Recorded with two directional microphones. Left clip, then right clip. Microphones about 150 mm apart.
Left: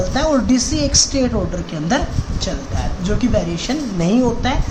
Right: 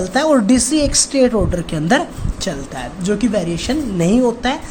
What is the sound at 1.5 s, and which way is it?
A woman's voice, 55° right (ahead or behind).